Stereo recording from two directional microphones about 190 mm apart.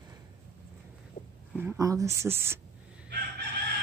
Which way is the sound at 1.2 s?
40° left (ahead or behind).